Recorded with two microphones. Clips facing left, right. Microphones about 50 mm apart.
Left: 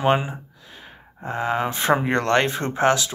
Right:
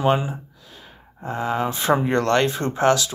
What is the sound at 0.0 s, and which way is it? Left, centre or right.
Speech, left.